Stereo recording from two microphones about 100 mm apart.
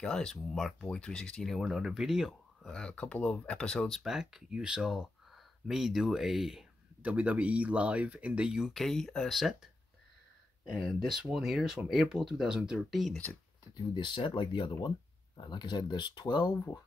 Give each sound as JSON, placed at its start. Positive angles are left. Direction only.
{"t": 0.0, "sound": "speech", "side_deg": 10}
{"t": 1.6, "sound": "speech", "side_deg": -5}
{"t": 2.7, "sound": "speech", "side_deg": 10}
{"t": 4.0, "sound": "speech", "side_deg": -5}
{"t": 7.0, "sound": "speech", "side_deg": -15}
{"t": 13.7, "sound": "speech", "side_deg": 50}